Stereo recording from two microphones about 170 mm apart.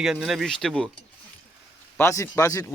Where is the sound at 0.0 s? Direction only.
Centre (ahead or behind).